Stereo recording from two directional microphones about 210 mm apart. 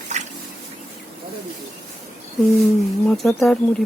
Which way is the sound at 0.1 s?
35° right (ahead or behind).